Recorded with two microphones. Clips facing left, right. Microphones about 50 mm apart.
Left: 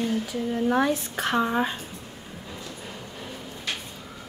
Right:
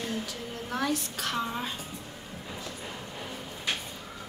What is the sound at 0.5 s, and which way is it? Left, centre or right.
A woman's voice, left.